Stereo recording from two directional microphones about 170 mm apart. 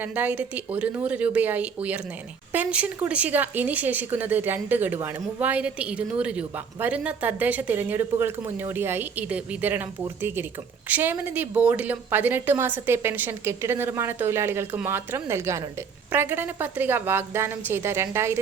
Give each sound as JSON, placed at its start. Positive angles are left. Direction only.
{"t": 0.0, "sound": "speech", "side_deg": -10}